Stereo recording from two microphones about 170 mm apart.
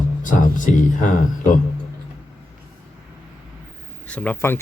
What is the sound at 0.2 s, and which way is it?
Speech, 50° left (ahead or behind).